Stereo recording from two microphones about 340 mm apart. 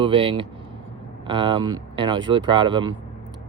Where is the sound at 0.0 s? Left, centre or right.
Centre.